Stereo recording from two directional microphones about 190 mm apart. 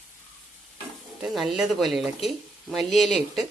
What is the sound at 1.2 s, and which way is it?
Speech, centre (ahead or behind).